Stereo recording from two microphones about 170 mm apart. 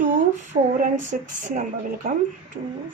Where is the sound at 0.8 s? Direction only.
50° right (ahead or behind).